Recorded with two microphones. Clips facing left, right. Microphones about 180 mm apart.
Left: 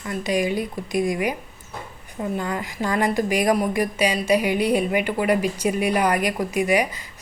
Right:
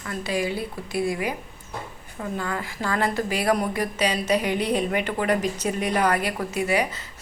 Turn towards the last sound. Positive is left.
turn(degrees=15)  # may be behind; listen again after turning